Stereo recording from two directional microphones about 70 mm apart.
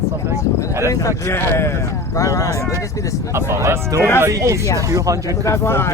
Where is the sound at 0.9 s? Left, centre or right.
Left.